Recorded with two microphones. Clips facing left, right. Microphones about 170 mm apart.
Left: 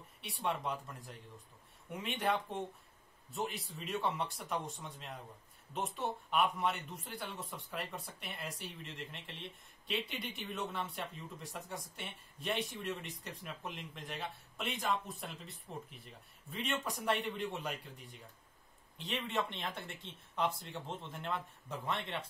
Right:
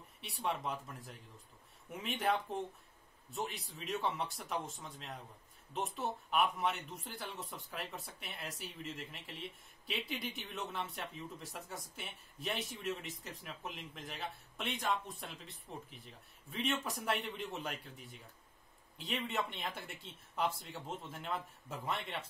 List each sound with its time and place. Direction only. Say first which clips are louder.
0.2 s speech: left 1 dB; centre (ahead or behind)